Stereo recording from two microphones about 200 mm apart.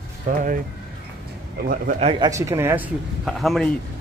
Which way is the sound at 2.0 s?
25° right (ahead or behind).